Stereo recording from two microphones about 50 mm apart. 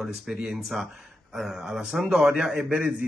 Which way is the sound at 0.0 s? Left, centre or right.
Centre.